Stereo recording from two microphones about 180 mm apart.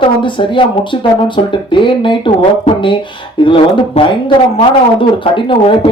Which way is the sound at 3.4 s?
30° left (ahead or behind).